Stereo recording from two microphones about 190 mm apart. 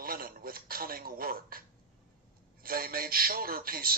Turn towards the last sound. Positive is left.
turn(degrees=-50)  # may be behind; listen again after turning